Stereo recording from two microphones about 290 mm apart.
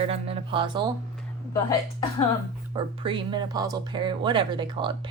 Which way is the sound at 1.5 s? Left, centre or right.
Centre.